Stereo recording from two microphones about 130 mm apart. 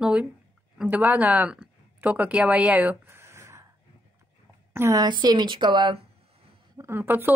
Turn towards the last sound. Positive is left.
turn(degrees=-15)  # may be behind; listen again after turning